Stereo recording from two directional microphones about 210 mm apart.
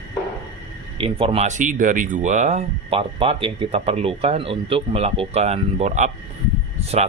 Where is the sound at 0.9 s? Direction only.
25° right (ahead or behind).